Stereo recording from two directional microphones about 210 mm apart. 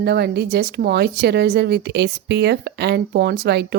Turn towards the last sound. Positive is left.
turn(degrees=-50)  # may be behind; listen again after turning